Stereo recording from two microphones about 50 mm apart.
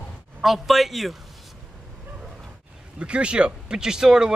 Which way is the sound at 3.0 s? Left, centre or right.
Right.